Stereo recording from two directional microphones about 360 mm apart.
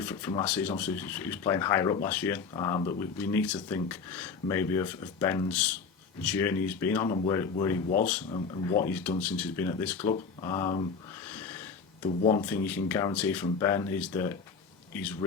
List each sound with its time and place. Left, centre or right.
0.0 s speech: centre
11.3 s a sound: centre
12.0 s speech: centre
12.4 s speech: centre